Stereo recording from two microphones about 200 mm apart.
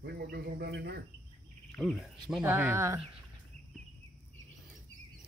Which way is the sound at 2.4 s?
10° right (ahead or behind).